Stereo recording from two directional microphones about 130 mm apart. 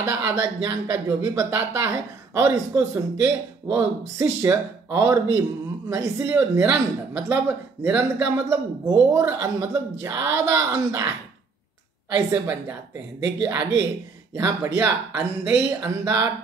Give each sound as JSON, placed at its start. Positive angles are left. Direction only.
{"t": 0.0, "sound": "speech", "side_deg": -25}
{"t": 8.8, "sound": "speech", "side_deg": -25}
{"t": 12.3, "sound": "a woman's voice", "side_deg": -15}